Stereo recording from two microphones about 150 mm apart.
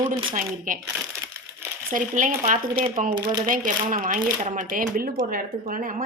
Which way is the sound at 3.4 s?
60° right (ahead or behind).